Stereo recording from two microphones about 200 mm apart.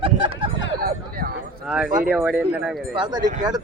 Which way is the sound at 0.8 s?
50° right (ahead or behind).